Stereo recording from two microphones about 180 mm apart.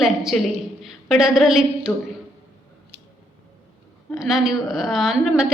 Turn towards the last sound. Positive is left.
turn(degrees=0)  # may be behind; listen again after turning